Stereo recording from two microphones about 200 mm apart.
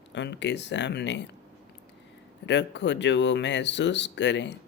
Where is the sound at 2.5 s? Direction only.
60° left (ahead or behind).